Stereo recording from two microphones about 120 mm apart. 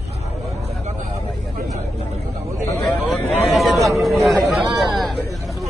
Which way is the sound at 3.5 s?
Centre (ahead or behind).